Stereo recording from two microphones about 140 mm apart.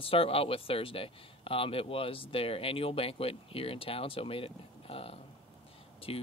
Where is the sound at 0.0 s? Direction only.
40° left (ahead or behind).